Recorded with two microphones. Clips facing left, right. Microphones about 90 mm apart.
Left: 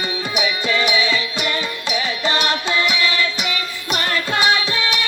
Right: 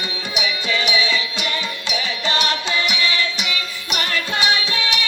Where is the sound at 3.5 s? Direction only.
35° left (ahead or behind).